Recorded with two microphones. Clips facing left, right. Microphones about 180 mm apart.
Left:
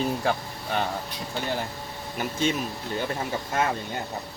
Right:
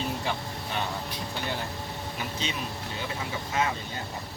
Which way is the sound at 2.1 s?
50° left (ahead or behind).